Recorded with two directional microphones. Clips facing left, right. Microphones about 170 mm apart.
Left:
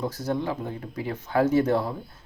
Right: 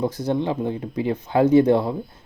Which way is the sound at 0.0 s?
15° right (ahead or behind).